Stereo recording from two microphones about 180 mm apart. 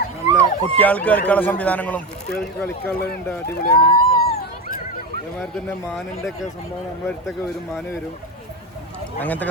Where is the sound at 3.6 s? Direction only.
55° left (ahead or behind).